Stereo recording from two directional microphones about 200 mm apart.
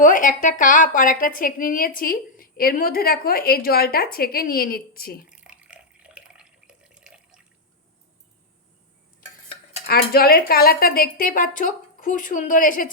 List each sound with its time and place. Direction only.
0.0 s a woman's voice: 40° left (ahead or behind)
5.3 s water: 5° right (ahead or behind)
9.8 s a woman's voice: 50° left (ahead or behind)